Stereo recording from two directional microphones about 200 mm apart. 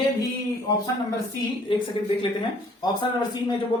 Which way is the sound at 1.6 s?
25° left (ahead or behind).